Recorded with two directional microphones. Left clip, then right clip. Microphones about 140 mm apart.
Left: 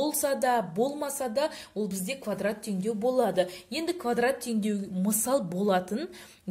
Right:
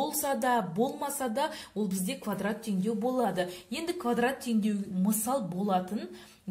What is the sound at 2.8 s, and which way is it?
A woman's voice, 35° left (ahead or behind).